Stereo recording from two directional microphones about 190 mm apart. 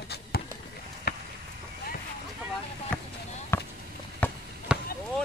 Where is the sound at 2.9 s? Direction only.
5° left (ahead or behind).